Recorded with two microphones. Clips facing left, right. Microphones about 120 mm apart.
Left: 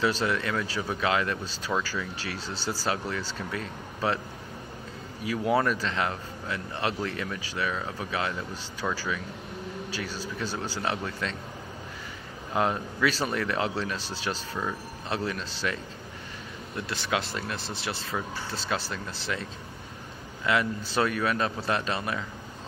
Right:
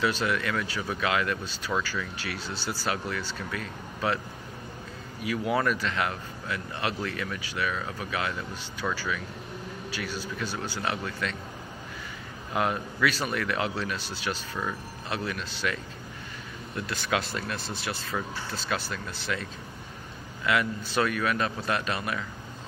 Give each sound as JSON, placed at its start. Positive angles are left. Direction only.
{"t": 0.0, "sound": "a man's voice", "side_deg": 30}
{"t": 1.7, "sound": "speech", "side_deg": 10}
{"t": 2.1, "sound": "a man's voice", "side_deg": 35}
{"t": 5.2, "sound": "a man's voice", "side_deg": 30}
{"t": 7.7, "sound": "a man's voice", "side_deg": 25}
{"t": 8.8, "sound": "speech", "side_deg": 10}
{"t": 9.8, "sound": "a man's voice", "side_deg": 35}
{"t": 12.5, "sound": "a man's voice", "side_deg": 30}
{"t": 14.5, "sound": "speech", "side_deg": 10}
{"t": 15.0, "sound": "a man's voice", "side_deg": 30}
{"t": 16.8, "sound": "a man's voice", "side_deg": 25}
{"t": 20.4, "sound": "a man's voice", "side_deg": 30}